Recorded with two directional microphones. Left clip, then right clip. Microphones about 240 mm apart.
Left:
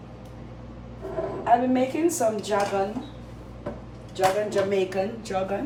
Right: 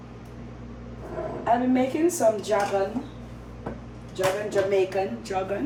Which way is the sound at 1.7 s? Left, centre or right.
Centre.